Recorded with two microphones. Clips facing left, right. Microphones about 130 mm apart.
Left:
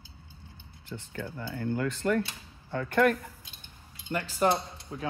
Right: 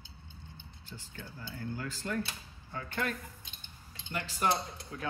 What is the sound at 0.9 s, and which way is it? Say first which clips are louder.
Speech: left 10 dB; 70° left (ahead or behind).